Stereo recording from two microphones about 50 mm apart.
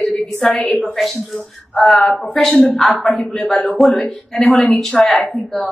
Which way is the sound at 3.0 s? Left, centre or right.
Left.